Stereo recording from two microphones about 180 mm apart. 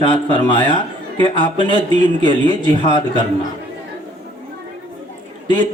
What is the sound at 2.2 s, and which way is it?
Speech, 25° left (ahead or behind).